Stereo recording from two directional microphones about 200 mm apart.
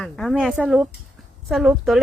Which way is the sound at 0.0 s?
Centre (ahead or behind).